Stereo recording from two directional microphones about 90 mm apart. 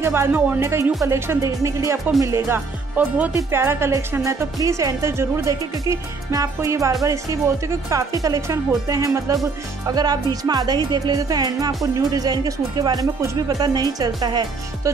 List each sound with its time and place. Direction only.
0.0 s speech: 25° right (ahead or behind)
9.8 s music: 45° right (ahead or behind)
13.6 s music: 45° right (ahead or behind)